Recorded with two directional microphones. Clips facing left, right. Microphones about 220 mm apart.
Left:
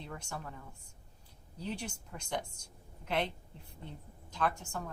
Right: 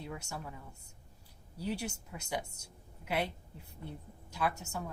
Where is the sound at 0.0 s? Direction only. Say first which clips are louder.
Right 1 dB; 10° right (ahead or behind).